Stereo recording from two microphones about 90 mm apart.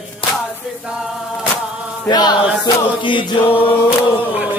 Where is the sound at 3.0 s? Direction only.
70° left (ahead or behind).